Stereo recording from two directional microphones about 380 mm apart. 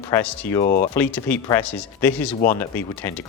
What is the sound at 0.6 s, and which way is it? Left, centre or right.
Speech, left.